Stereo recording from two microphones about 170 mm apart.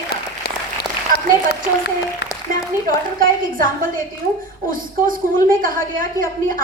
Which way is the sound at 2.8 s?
55° right (ahead or behind).